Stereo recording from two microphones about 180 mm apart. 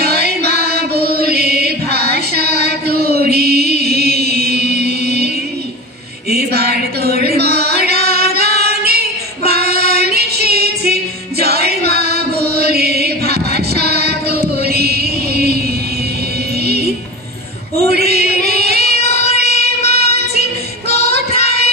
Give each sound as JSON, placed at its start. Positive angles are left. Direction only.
{"t": 0.0, "sound": "music", "side_deg": -60}
{"t": 6.3, "sound": "a sound", "side_deg": -60}
{"t": 9.4, "sound": "child singing", "side_deg": -60}
{"t": 11.4, "sound": "chant", "side_deg": -60}
{"t": 16.6, "sound": "music", "side_deg": -60}
{"t": 17.7, "sound": "a sound", "side_deg": -60}
{"t": 18.4, "sound": "child singing", "side_deg": -60}
{"t": 19.4, "sound": "music", "side_deg": -60}
{"t": 21.0, "sound": "child singing", "side_deg": -55}